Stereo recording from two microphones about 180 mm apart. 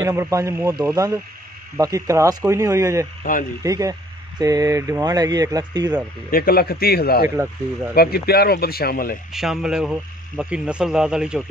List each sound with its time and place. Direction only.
0.0 s speech: 15° right (ahead or behind)
6.3 s speech: 55° left (ahead or behind)
7.2 s speech: 10° right (ahead or behind)
7.9 s speech: 60° left (ahead or behind)
9.3 s speech: centre (ahead or behind)